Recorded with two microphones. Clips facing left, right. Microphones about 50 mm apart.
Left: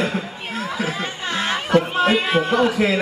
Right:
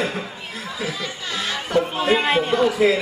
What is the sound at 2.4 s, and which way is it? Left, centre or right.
Speech, left.